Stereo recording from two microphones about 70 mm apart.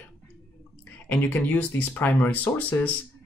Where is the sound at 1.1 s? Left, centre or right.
Left.